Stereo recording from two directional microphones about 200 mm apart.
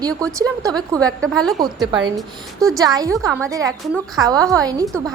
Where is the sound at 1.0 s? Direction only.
5° left (ahead or behind).